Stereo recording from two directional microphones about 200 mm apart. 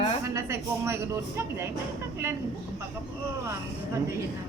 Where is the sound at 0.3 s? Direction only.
15° right (ahead or behind).